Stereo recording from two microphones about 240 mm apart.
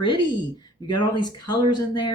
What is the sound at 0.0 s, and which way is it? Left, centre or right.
Speech, centre.